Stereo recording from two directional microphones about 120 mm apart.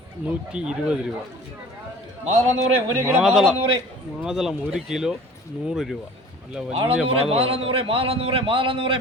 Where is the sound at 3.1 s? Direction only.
5° right (ahead or behind).